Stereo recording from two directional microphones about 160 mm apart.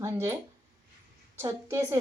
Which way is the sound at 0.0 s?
15° right (ahead or behind).